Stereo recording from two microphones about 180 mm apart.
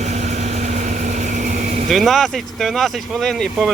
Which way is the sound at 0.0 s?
40° right (ahead or behind).